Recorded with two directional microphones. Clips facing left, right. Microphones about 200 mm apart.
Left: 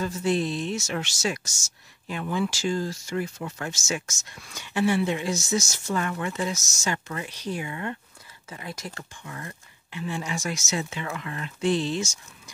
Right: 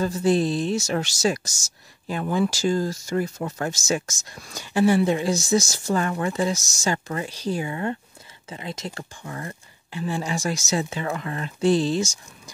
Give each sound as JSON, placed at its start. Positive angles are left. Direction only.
{"t": 0.0, "sound": "speech", "side_deg": -35}